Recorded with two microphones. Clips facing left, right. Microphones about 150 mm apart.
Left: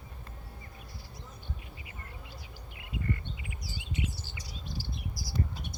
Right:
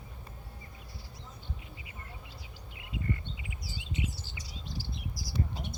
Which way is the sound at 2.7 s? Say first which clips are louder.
Left 1 dB; 20° right (ahead or behind).